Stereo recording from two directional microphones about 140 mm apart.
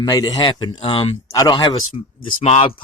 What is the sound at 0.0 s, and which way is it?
Speech, 25° left (ahead or behind).